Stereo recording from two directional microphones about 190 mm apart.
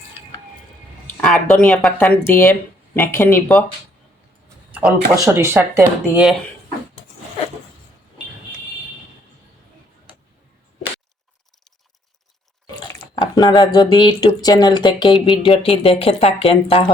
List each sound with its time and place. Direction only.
1.2 s a woman's voice: 10° left (ahead or behind)
4.8 s speech: 5° right (ahead or behind)
13.1 s speech: 20° left (ahead or behind)